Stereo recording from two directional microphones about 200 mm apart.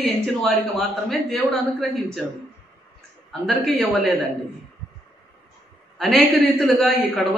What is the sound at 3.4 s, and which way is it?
Speech, centre (ahead or behind).